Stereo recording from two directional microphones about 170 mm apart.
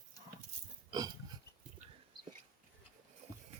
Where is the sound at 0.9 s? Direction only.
25° right (ahead or behind).